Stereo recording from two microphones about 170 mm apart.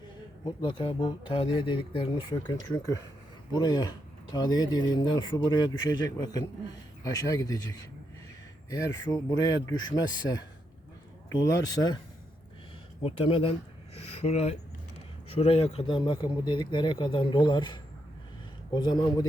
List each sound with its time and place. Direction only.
0.4 s speech: 30° left (ahead or behind)
13.0 s speech: 30° left (ahead or behind)